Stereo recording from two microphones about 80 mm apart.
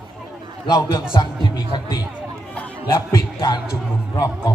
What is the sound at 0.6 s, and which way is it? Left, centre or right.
Speech, left.